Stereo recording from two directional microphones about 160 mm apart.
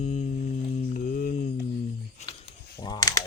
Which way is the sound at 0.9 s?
60° left (ahead or behind).